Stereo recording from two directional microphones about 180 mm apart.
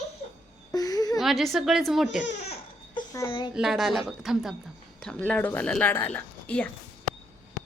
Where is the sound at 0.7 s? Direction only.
20° left (ahead or behind).